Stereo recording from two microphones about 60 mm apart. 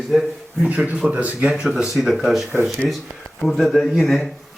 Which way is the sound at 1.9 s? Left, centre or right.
Centre.